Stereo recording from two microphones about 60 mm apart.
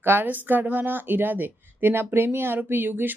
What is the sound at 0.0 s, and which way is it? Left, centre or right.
Speech, right.